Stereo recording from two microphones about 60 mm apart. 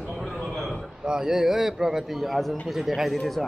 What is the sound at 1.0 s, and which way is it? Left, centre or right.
A man's voice, centre.